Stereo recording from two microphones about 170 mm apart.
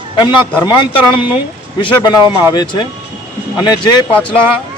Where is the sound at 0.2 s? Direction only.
25° left (ahead or behind).